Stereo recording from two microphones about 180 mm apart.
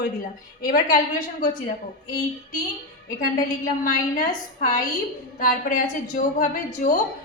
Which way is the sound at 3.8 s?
50° left (ahead or behind).